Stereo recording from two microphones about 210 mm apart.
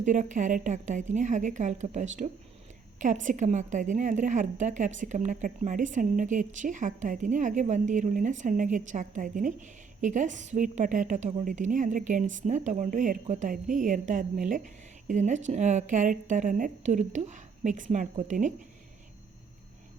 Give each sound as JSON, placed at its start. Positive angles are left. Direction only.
{"t": 0.0, "sound": "a woman's voice", "side_deg": -35}